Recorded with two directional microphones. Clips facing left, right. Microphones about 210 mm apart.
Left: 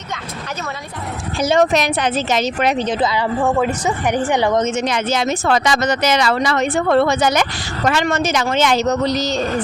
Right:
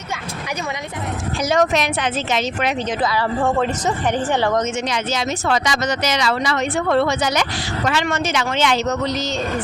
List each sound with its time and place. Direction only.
1.4 s a woman's voice: 30° left (ahead or behind)
3.0 s speech: 20° left (ahead or behind)
3.4 s speech: 10° left (ahead or behind)
4.9 s a woman's voice: 55° left (ahead or behind); by 9.4 s 35° left (ahead or behind)